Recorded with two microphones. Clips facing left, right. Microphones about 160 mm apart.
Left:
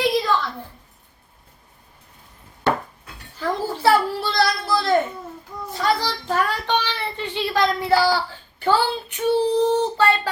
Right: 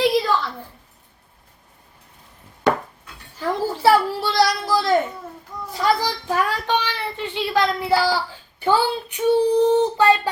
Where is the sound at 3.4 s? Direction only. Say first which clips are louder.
Right 1 dB; 10° right (ahead or behind).